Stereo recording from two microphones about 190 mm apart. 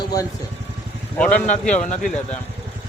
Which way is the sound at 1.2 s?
5° left (ahead or behind).